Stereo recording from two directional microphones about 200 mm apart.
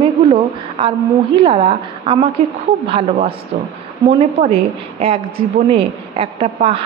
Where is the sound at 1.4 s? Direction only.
25° right (ahead or behind).